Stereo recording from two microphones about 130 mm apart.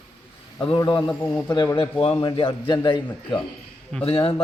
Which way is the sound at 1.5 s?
30° left (ahead or behind).